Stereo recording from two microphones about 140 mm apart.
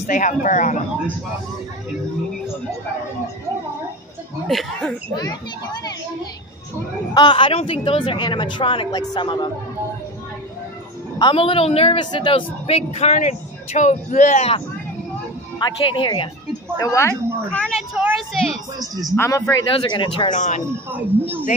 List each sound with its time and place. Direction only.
0.0 s speech: 65° left (ahead or behind)
4.5 s a woman's voice: centre (ahead or behind)
5.1 s speech: 30° left (ahead or behind)
7.2 s speech: 35° left (ahead or behind)
11.1 s a woman's voice: 35° left (ahead or behind); by 14.4 s 60° left (ahead or behind)
15.6 s speech: 35° left (ahead or behind)
16.7 s speech: 20° left (ahead or behind)
17.5 s a woman's voice: 5° left (ahead or behind)
19.1 s speech: 20° left (ahead or behind)
19.8 s speech: 35° left (ahead or behind)
20.3 s speech: 60° left (ahead or behind)
20.9 s speech: 15° right (ahead or behind)